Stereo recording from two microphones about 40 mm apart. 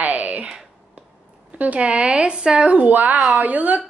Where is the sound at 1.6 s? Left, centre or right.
Right.